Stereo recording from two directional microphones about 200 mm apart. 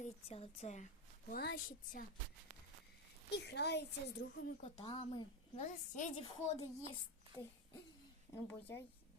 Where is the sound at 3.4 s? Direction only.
55° left (ahead or behind); by 4.5 s 80° left.